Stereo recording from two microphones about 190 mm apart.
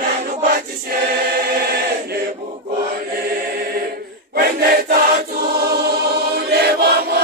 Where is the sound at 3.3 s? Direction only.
50° right (ahead or behind).